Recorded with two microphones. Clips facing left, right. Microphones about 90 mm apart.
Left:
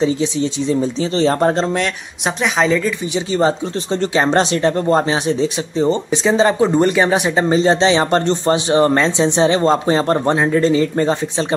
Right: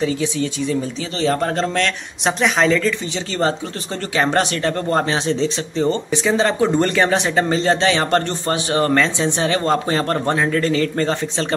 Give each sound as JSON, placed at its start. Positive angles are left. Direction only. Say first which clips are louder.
{"t": 0.0, "sound": "speech", "louder": "left 3 dB", "side_deg": 25}
{"t": 2.2, "sound": "a woman's voice", "louder": "even", "side_deg": 5}
{"t": 3.3, "sound": "speech", "louder": "left 4 dB", "side_deg": 20}